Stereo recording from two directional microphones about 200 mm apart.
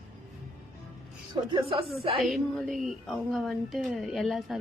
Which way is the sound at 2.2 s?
Centre (ahead or behind).